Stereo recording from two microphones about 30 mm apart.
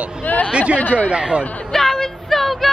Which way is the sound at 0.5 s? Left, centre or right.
Right.